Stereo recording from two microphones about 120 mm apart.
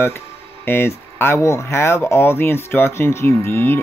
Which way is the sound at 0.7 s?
20° left (ahead or behind).